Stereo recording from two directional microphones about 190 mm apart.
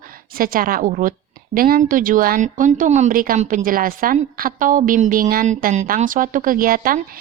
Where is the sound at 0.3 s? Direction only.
50° right (ahead or behind).